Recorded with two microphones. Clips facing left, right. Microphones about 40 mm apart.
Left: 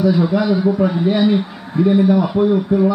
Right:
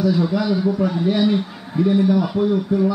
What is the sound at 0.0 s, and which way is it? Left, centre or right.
A man's voice, left.